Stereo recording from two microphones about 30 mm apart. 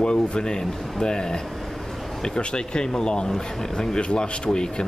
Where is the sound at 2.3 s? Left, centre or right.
Left.